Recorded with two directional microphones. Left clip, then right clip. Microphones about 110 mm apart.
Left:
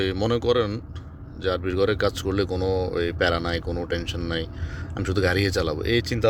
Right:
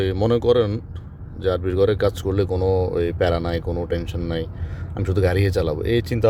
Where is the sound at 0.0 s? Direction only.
40° right (ahead or behind).